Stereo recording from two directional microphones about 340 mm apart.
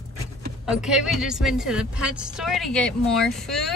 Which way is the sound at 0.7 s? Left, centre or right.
Centre.